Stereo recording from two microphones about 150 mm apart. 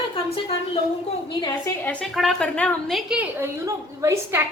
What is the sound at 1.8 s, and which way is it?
A woman's voice, 10° left (ahead or behind).